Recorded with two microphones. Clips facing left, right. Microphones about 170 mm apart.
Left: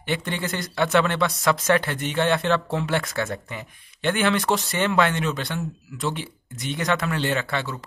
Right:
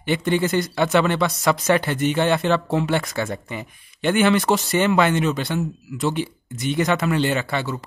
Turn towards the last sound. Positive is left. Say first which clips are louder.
# right 3 dB
turn(degrees=-5)  # may be behind; listen again after turning